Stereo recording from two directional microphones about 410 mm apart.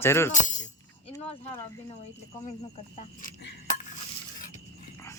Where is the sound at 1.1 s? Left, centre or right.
Centre.